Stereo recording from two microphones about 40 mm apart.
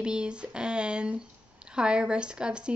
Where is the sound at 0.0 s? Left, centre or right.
Right.